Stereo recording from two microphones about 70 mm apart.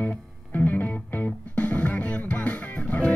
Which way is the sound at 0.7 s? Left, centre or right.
Left.